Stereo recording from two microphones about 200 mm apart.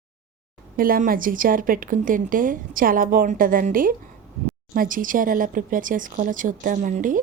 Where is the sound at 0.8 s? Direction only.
45° right (ahead or behind).